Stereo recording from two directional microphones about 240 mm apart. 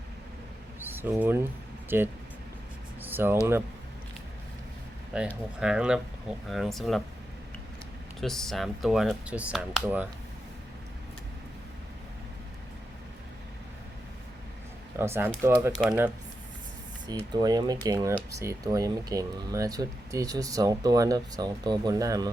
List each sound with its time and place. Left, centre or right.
0.8 s speech: centre
3.0 s a sound: centre
5.1 s speech: centre
8.2 s speech: centre
14.9 s speech: centre
17.3 s speech: centre